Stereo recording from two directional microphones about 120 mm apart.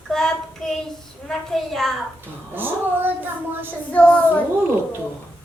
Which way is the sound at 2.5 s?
15° right (ahead or behind).